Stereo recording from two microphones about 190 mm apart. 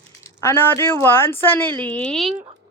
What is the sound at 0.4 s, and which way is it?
Speech, 10° left (ahead or behind).